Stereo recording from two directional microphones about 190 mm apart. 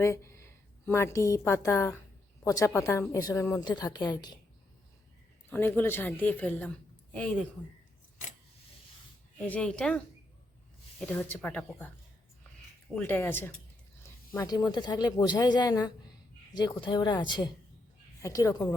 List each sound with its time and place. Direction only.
0.0 s a woman's voice: 15° left (ahead or behind)
5.5 s a woman's voice: 10° left (ahead or behind)
9.5 s speech: 5° left (ahead or behind)
11.0 s a woman's voice: 10° left (ahead or behind)
13.0 s a woman's voice: 10° left (ahead or behind)